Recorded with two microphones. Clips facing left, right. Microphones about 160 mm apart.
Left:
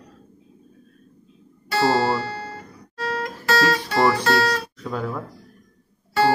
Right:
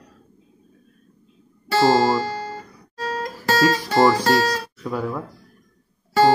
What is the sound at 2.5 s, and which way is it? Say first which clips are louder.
Music: right 1 dB; 35° right (ahead or behind).